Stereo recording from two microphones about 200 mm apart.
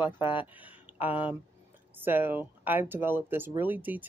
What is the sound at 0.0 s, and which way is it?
Speech, 25° left (ahead or behind).